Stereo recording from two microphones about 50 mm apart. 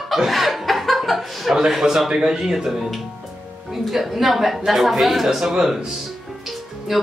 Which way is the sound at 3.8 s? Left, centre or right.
Centre.